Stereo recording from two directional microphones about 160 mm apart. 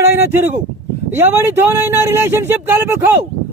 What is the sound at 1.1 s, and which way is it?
Speech, 15° right (ahead or behind).